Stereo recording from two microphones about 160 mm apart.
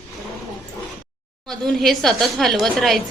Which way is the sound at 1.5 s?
Centre (ahead or behind).